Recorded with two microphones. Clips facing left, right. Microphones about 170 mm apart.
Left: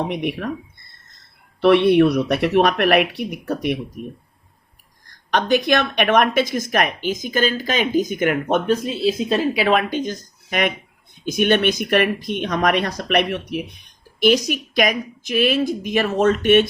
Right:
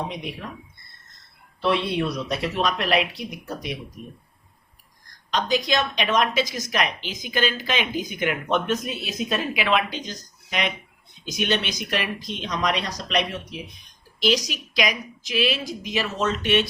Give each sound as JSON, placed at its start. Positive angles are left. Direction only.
{"t": 0.1, "sound": "speech", "side_deg": 65}
{"t": 1.6, "sound": "speech", "side_deg": 65}
{"t": 5.3, "sound": "speech", "side_deg": 60}
{"t": 8.7, "sound": "speech", "side_deg": 30}